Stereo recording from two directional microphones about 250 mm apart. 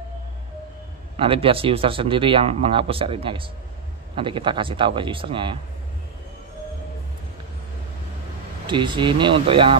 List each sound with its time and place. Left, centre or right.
1.1 s speech: right
8.6 s speech: centre